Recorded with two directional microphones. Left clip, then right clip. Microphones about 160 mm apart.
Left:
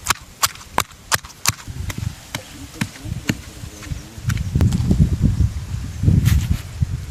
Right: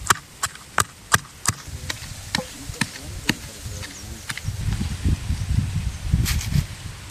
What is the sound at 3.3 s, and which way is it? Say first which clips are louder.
Insect: right 1 dB; 90° left.